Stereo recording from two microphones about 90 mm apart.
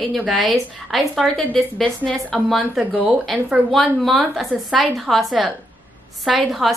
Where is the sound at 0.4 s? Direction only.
Centre (ahead or behind).